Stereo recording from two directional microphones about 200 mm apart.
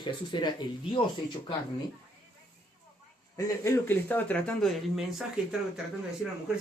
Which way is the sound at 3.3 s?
15° left (ahead or behind).